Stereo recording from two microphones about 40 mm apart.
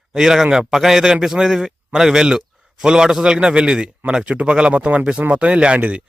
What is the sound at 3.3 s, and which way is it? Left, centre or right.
Speech, right.